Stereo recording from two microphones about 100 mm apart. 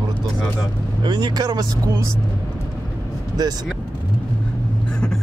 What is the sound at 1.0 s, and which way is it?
Speech, 45° right (ahead or behind).